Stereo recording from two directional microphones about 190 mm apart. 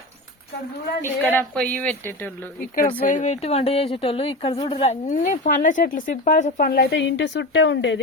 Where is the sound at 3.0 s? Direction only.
40° left (ahead or behind).